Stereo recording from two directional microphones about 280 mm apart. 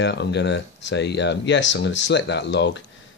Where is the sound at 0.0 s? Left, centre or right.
Left.